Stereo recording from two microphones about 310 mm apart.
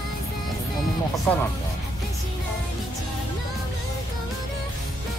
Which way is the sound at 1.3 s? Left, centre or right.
Centre.